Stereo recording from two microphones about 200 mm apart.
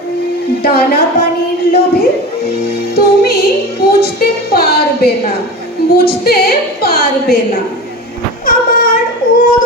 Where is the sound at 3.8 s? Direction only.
50° left (ahead or behind).